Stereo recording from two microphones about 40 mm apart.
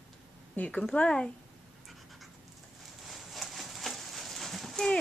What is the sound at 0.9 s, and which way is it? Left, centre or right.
Speech, left.